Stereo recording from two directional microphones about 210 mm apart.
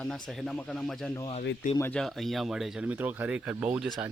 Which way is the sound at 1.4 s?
55° left (ahead or behind).